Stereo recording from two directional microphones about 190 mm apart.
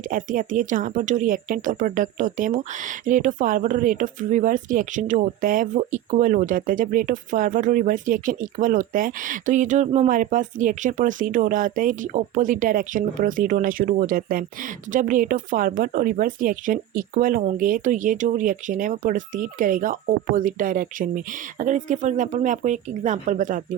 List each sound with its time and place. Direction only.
0.1 s speech: 45° right (ahead or behind)